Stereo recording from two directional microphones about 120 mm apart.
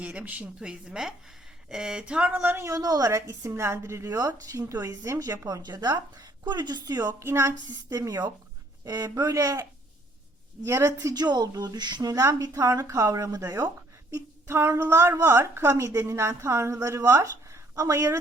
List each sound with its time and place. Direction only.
0.0 s a woman's voice: 10° right (ahead or behind)
10.7 s a woman's voice: 25° right (ahead or behind)
11.1 s a woman's voice: 35° right (ahead or behind)